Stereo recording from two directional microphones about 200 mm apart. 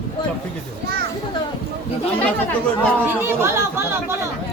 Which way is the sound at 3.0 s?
10° right (ahead or behind).